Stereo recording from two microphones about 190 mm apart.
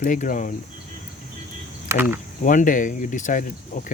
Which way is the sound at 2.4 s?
45° left (ahead or behind).